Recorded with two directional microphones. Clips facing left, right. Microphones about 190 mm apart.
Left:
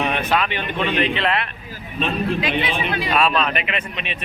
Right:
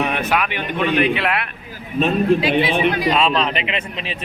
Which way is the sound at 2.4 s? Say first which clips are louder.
Right 6 dB; 30° right (ahead or behind).